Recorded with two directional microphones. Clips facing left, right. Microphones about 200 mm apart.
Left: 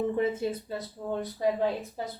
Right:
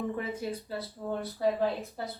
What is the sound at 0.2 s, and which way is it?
Speech, 20° left (ahead or behind).